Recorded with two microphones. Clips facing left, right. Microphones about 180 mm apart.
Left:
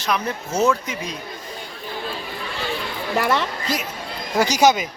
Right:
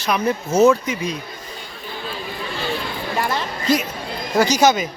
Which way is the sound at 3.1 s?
75° left (ahead or behind).